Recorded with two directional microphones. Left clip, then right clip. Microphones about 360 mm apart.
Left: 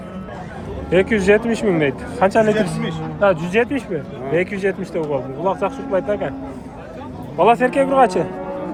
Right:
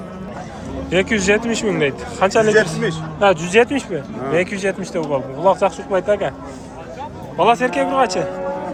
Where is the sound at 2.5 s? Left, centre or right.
Right.